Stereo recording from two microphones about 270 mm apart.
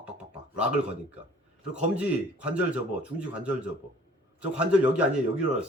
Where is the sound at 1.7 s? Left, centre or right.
Centre.